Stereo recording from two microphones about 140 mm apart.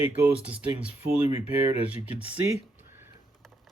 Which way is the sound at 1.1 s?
45° left (ahead or behind).